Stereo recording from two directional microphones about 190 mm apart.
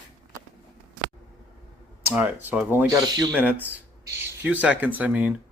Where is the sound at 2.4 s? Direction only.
10° right (ahead or behind).